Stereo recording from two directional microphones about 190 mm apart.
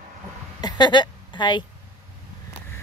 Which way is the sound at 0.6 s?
25° left (ahead or behind).